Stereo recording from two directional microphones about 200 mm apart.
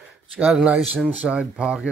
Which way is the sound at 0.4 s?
5° right (ahead or behind).